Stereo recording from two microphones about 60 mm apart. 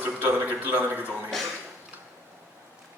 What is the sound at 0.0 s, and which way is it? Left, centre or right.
A man's voice, right.